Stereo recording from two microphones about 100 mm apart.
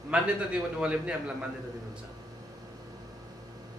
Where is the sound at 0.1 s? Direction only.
10° right (ahead or behind).